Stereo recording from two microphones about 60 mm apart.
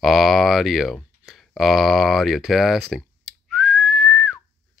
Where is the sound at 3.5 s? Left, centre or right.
Centre.